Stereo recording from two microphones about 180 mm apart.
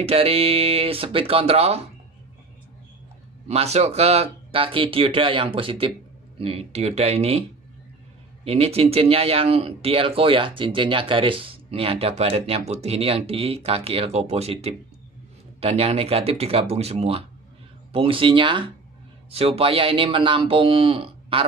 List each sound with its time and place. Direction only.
0.0 s speech: 30° right (ahead or behind)
3.4 s speech: 35° right (ahead or behind)
8.5 s speech: 35° right (ahead or behind)